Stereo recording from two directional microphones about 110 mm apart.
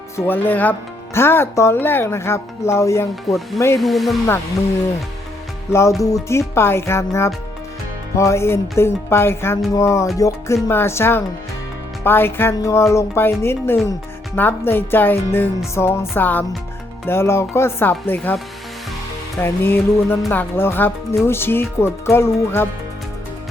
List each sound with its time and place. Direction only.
0.2 s speech: 15° left (ahead or behind)
3.8 s speech: centre (ahead or behind)
6.0 s speech: 30° left (ahead or behind)
19.4 s speech: 20° left (ahead or behind)